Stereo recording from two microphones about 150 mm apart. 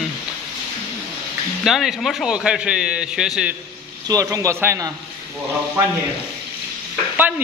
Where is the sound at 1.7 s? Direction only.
Centre (ahead or behind).